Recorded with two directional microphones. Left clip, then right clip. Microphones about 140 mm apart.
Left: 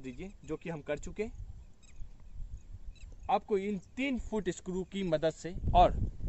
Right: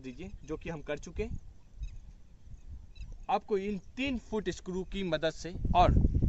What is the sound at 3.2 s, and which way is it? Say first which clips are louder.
Speech: even; 15° left (ahead or behind).